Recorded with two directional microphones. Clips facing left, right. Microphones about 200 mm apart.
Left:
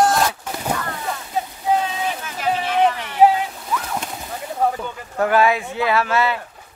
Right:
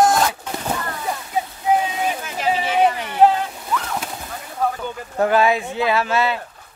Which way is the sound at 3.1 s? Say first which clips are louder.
Left 1 dB; 5° left (ahead or behind).